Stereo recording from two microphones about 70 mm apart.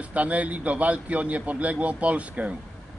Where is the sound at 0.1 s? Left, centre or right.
Centre.